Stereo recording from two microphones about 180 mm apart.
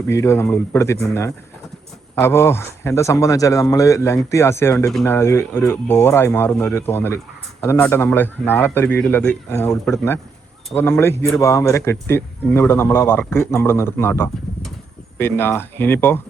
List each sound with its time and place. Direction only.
0.1 s a man's voice: 15° left (ahead or behind)